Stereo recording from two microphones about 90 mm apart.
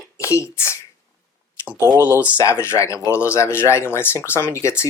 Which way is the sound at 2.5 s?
30° left (ahead or behind).